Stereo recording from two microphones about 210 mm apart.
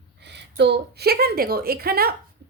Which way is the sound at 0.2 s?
55° right (ahead or behind).